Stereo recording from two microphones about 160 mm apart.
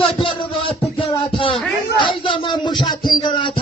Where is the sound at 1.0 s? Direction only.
35° left (ahead or behind).